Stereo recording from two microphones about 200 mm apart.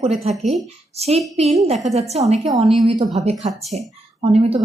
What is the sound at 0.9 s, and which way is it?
A woman's voice, 30° right (ahead or behind).